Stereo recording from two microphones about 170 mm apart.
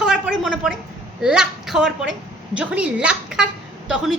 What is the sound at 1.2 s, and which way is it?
A woman's voice, 5° right (ahead or behind).